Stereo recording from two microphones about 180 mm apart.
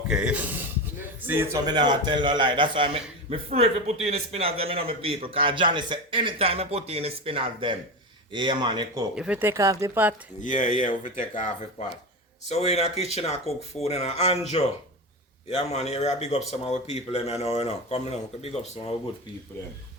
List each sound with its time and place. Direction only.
0.1 s speech: 5° right (ahead or behind)
1.6 s a man's voice: 25° right (ahead or behind)
9.1 s speech: 5° right (ahead or behind)
10.4 s speech: 45° left (ahead or behind)